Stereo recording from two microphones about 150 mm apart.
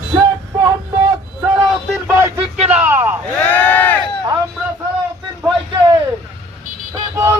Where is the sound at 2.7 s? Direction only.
15° right (ahead or behind).